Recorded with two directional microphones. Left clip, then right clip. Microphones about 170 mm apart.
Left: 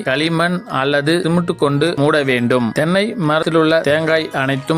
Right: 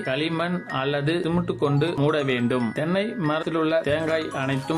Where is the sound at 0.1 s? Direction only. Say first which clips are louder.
Left 10 dB; 40° left (ahead or behind).